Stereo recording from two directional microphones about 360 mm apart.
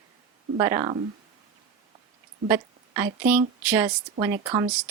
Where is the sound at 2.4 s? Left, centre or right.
Centre.